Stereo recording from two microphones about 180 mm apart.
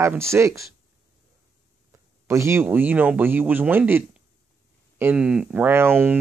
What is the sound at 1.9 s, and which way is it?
Speech, 15° right (ahead or behind).